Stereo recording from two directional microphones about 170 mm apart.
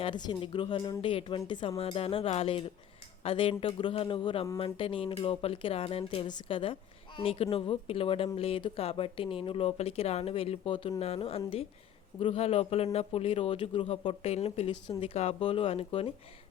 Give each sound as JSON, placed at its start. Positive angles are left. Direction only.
{"t": 0.0, "sound": "a man's voice", "side_deg": 25}